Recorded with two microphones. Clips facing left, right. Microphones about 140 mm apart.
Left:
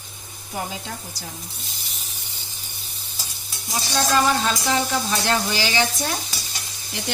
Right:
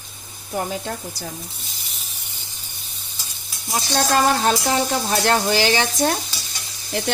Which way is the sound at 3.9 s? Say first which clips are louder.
Right 2 dB; 50° right (ahead or behind).